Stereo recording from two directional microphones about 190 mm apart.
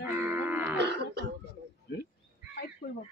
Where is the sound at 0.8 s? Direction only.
65° right (ahead or behind).